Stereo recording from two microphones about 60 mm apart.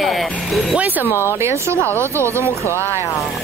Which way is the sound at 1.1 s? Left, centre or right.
Left.